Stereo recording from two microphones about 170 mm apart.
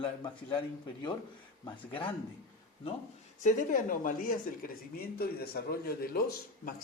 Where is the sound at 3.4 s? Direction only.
55° left (ahead or behind).